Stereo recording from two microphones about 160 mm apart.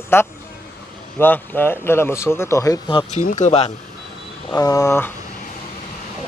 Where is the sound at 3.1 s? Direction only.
50° left (ahead or behind).